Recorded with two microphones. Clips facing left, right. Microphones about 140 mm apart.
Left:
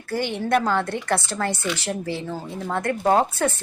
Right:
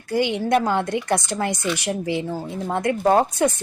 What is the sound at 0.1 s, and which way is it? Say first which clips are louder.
Speech: right 3 dB; 15° right (ahead or behind).